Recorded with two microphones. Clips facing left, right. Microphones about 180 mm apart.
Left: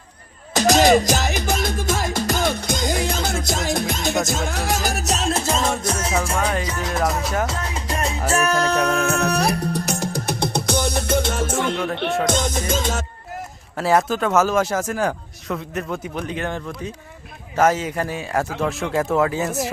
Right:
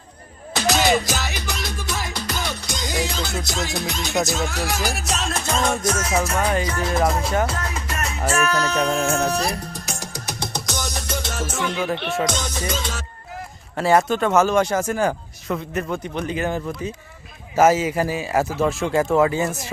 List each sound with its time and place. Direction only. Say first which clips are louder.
0.5 s music: left 5 dB; 45° left (ahead or behind)
6.3 s speech: right 1 dB; centre (ahead or behind)
7.7 s music: left 3 dB; 30° left (ahead or behind)
8.3 s music: left 2 dB; 40° left (ahead or behind)
13.7 s speech: right 1 dB; centre (ahead or behind)